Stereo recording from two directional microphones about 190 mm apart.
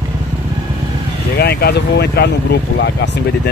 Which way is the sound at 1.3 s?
55° left (ahead or behind).